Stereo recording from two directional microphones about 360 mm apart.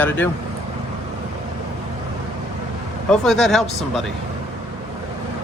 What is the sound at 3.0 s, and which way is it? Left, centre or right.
Speech, centre.